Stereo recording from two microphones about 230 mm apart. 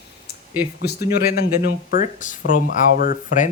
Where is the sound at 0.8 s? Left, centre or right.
Left.